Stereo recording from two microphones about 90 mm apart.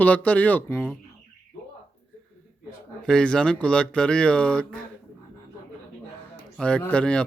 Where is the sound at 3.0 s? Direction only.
10° left (ahead or behind).